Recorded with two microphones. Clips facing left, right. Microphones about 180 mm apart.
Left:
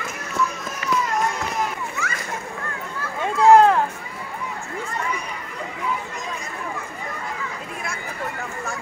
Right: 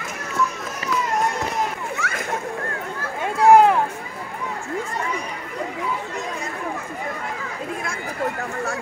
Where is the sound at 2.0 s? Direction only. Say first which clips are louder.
Right 2 dB; 65° right (ahead or behind).